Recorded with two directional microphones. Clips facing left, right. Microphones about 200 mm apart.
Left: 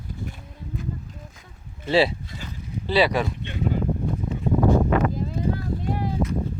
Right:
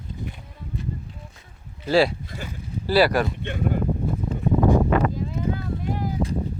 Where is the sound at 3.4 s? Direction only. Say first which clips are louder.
Right 1 dB; 55° right (ahead or behind).